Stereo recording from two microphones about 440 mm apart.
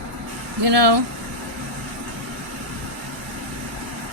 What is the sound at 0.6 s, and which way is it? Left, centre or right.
Speech, right.